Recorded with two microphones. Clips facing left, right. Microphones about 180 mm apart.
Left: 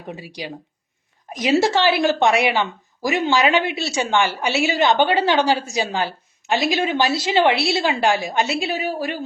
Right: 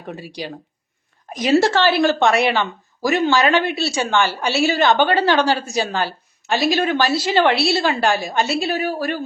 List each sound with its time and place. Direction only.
0.2 s a woman's voice: 15° left (ahead or behind)